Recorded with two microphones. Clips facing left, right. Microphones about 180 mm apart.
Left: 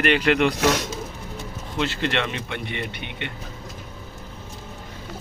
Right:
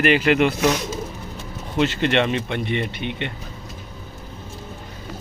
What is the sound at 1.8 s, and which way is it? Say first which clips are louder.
Speech: right 5 dB; 20° right (ahead or behind).